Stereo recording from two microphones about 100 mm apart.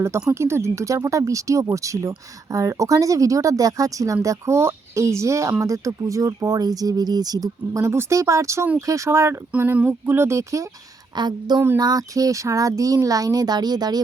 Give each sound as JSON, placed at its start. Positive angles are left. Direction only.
{"t": 0.3, "sound": "speech", "side_deg": -25}
{"t": 11.1, "sound": "a woman's voice", "side_deg": -45}